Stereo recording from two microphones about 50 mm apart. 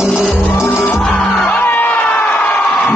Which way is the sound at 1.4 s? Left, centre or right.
Left.